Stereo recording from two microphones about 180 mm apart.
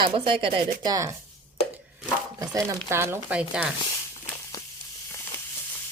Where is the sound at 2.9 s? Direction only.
15° right (ahead or behind).